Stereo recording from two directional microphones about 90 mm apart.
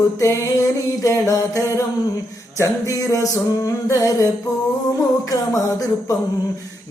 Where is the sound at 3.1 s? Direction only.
40° left (ahead or behind).